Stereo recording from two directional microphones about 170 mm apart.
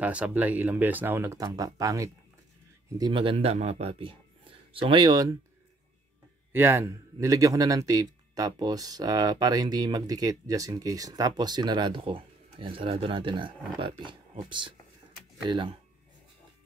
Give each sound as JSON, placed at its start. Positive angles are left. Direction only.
{"t": 0.0, "sound": "a man's voice", "side_deg": -10}
{"t": 6.5, "sound": "a man's voice", "side_deg": -15}